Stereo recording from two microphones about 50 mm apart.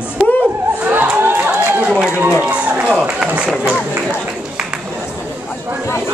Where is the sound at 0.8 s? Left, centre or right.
Right.